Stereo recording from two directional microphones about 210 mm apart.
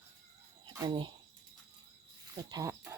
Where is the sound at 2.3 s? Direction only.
15° right (ahead or behind).